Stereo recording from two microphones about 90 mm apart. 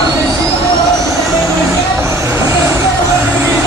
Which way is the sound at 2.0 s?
35° right (ahead or behind).